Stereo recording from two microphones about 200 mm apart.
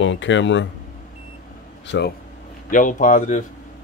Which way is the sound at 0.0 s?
70° left (ahead or behind).